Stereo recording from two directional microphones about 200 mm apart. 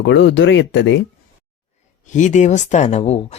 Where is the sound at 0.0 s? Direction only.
65° left (ahead or behind).